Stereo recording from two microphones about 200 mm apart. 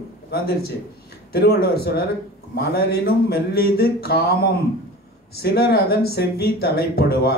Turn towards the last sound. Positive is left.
turn(degrees=50)  # may be behind; listen again after turning